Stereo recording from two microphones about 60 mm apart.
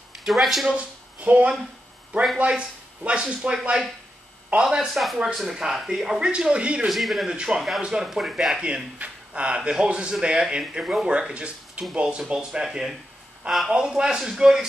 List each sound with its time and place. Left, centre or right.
0.1 s speech: centre
0.7 s speech: right
6.9 s speech: centre
7.2 s speech: centre
8.9 s speech: right; by 13.7 s centre
13.7 s speech: centre